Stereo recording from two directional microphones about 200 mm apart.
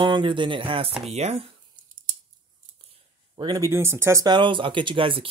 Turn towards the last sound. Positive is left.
turn(degrees=-25)  # may be behind; listen again after turning